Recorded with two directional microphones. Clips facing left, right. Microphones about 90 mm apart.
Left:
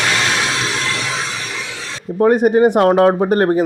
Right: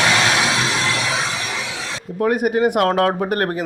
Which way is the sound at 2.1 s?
30° left (ahead or behind).